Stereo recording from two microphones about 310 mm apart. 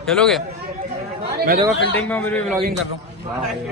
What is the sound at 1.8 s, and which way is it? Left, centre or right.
Speech, left.